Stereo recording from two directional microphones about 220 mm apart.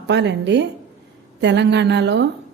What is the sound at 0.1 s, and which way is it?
Speech, 50° right (ahead or behind).